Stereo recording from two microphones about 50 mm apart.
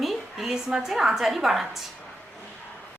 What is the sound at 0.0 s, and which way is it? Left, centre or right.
A woman's voice, centre.